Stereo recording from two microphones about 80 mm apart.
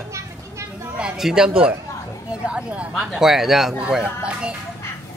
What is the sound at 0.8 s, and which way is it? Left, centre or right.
Speech, centre.